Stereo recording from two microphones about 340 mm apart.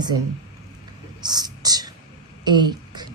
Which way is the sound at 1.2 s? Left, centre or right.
Centre.